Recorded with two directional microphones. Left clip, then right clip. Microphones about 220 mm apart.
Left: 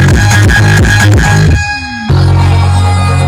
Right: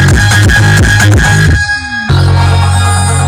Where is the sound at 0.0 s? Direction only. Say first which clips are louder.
Right 1 dB; 5° right (ahead or behind).